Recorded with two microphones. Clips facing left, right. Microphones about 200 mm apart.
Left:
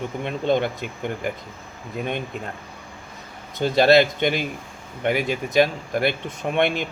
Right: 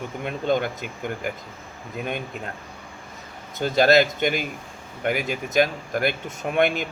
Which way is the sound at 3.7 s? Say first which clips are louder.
Left 2 dB; 45° right (ahead or behind).